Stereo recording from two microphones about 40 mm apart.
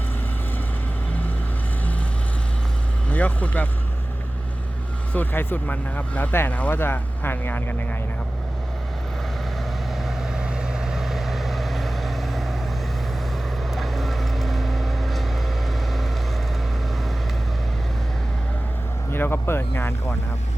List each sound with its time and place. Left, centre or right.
3.1 s speech: left
5.1 s speech: left
5.6 s speech: left
6.7 s speech: left
9.9 s vehicle: centre
13.7 s vehicle: centre
19.1 s a sound: left